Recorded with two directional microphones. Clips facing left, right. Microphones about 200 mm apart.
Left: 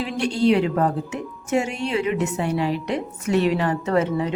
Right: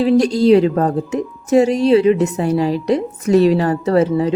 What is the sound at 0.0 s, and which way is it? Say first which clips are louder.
A woman's voice: right 8 dB; 35° right (ahead or behind).